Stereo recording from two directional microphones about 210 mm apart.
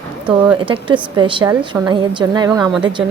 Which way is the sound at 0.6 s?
25° right (ahead or behind).